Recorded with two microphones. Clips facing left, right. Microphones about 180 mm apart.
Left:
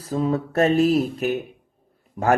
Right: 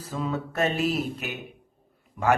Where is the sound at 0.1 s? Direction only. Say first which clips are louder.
Left 7 dB; 35° left (ahead or behind).